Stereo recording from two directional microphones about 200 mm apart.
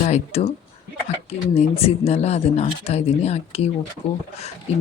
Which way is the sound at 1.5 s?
30° left (ahead or behind).